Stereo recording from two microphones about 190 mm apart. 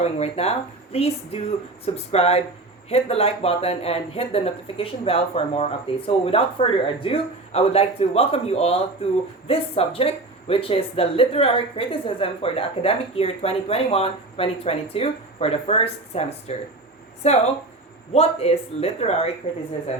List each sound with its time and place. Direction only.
0.0 s speech: 35° left (ahead or behind)